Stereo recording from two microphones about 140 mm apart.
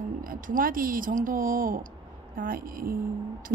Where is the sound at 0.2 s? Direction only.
80° right.